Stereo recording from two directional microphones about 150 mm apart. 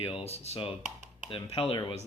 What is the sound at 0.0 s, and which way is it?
Speech, 40° left (ahead or behind).